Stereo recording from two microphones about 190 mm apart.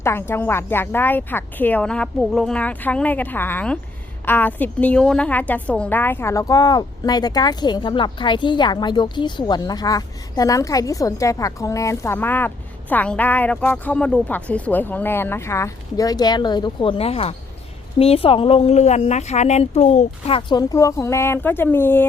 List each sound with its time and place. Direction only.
0.0 s a woman's voice: 10° left (ahead or behind)